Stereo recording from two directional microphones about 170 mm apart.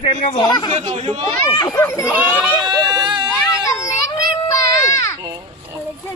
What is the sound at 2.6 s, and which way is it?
Baby cry, 25° right (ahead or behind).